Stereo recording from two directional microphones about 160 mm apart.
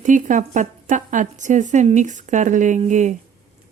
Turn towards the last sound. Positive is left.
turn(degrees=-50)  # may be behind; listen again after turning